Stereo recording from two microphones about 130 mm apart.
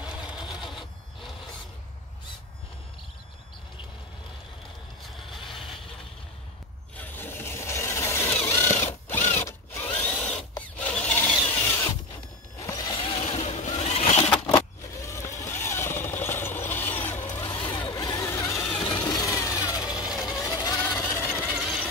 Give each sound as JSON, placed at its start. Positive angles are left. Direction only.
{"t": 0.0, "sound": "sewing machine", "side_deg": -5}
{"t": 5.3, "sound": "vehicle", "side_deg": 0}
{"t": 7.0, "sound": "vehicle", "side_deg": 15}
{"t": 10.8, "sound": "a sound", "side_deg": 10}
{"t": 12.5, "sound": "a sound", "side_deg": 25}
{"t": 14.3, "sound": "a sound", "side_deg": 10}
{"t": 14.6, "sound": "vehicle", "side_deg": 25}
{"t": 17.1, "sound": "vehicle", "side_deg": 65}
{"t": 17.6, "sound": "vehicle", "side_deg": 35}
{"t": 18.1, "sound": "vehicle", "side_deg": 25}
{"t": 18.8, "sound": "vehicle", "side_deg": 35}
{"t": 20.3, "sound": "a sound", "side_deg": 30}
{"t": 20.9, "sound": "vehicle", "side_deg": 15}
{"t": 21.5, "sound": "vehicle", "side_deg": -5}